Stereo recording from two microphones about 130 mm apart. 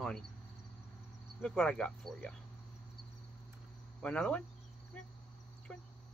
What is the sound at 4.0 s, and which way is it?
Cricket, 10° left (ahead or behind).